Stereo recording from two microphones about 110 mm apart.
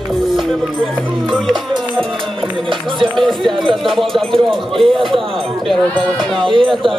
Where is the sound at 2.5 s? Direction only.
50° right (ahead or behind).